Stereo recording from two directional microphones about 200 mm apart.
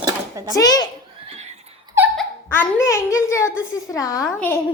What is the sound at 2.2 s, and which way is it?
Speech, 10° left (ahead or behind).